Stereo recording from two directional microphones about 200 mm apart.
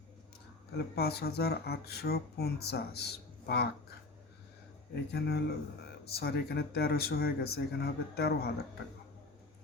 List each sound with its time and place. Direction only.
0.9 s speech: 55° left (ahead or behind)
5.1 s a man's voice: 55° left (ahead or behind)